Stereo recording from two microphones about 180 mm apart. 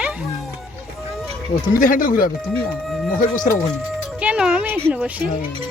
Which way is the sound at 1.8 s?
50° left (ahead or behind).